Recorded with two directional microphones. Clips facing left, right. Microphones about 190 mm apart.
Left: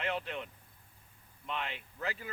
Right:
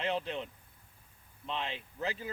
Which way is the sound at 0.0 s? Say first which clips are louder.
Right 2 dB; 25° right (ahead or behind).